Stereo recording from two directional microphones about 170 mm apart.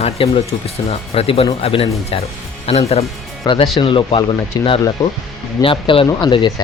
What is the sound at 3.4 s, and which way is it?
Speech, 25° left (ahead or behind).